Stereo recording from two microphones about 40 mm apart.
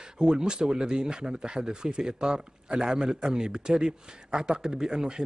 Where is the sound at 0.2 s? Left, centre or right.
Right.